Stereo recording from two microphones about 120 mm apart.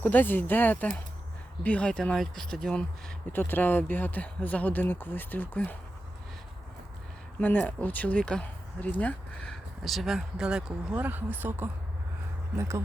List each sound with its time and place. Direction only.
0.0 s speech: 15° left (ahead or behind)
3.3 s speech: 15° left (ahead or behind)
7.4 s speech: 10° left (ahead or behind); by 12.8 s 25° right (ahead or behind)